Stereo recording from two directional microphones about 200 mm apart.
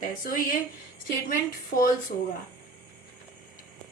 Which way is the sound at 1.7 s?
45° left (ahead or behind).